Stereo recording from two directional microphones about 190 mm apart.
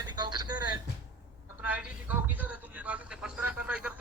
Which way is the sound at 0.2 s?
20° right (ahead or behind).